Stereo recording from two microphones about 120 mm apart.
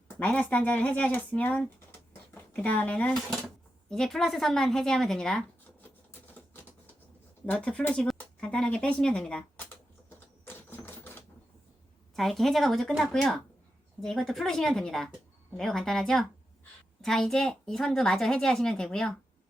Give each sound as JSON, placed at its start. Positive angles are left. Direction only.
{"t": 0.2, "sound": "speech", "side_deg": 10}
{"t": 7.4, "sound": "speech", "side_deg": 10}
{"t": 9.6, "sound": "typewriter", "side_deg": 20}
{"t": 12.1, "sound": "speech", "side_deg": 0}